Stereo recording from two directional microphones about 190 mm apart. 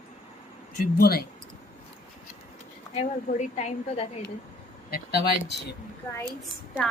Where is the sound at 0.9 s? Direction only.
55° left (ahead or behind).